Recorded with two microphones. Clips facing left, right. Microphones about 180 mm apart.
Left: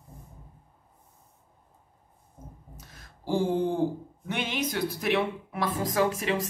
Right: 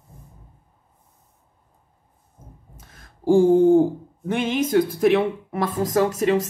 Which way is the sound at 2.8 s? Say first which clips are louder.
Right 2 dB; 50° right (ahead or behind).